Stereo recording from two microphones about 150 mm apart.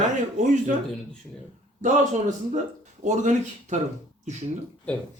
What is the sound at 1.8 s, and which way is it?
A man's voice, 55° right (ahead or behind).